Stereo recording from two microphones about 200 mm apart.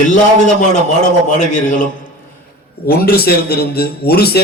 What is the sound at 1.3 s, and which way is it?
Speech, 40° left (ahead or behind).